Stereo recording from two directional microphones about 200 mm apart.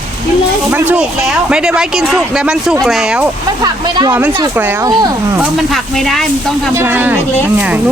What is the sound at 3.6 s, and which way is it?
Speech, 20° right (ahead or behind).